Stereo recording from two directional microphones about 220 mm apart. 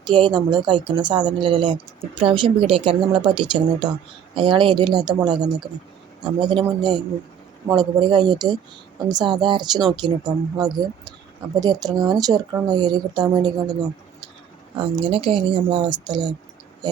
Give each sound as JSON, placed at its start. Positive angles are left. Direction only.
{"t": 0.0, "sound": "speech", "side_deg": -20}
{"t": 14.8, "sound": "speech", "side_deg": -25}